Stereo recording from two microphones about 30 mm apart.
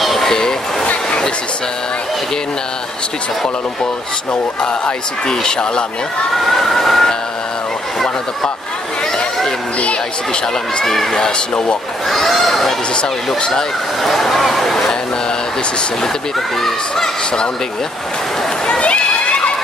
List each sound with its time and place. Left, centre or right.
0.0 s a sound: centre
0.3 s a sound: centre
4.3 s speech: left
5.3 s speech: left
6.3 s speech: centre
10.9 s speech: centre
11.2 s speech: left
12.1 s speech: centre
14.0 s speech: centre
16.6 s speech: centre
18.8 s run: left